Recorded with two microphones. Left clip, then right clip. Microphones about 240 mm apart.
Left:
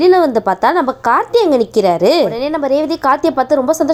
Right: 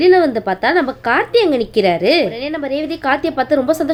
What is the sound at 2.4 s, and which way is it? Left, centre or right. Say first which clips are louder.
Speech: left 5 dB; centre.